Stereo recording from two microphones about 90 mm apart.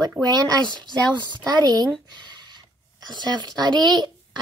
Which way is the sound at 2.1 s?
55° right (ahead or behind).